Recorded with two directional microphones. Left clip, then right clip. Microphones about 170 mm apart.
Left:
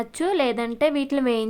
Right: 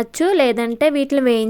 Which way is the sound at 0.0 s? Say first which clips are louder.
Right 7 dB; 30° right (ahead or behind).